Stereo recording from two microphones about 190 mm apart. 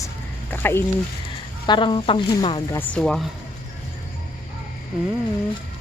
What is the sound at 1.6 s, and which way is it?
Speech, 25° left (ahead or behind).